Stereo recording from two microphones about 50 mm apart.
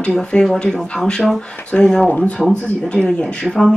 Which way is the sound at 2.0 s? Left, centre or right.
Left.